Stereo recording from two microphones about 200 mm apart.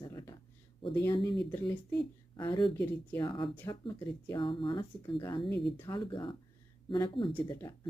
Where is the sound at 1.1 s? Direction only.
25° left (ahead or behind).